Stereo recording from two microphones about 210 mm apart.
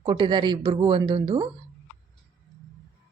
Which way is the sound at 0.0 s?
20° right (ahead or behind).